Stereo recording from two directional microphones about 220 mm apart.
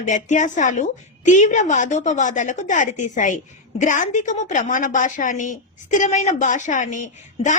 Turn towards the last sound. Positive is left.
turn(degrees=35)  # may be behind; listen again after turning